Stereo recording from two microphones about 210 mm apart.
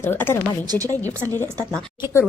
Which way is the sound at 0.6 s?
15° right (ahead or behind).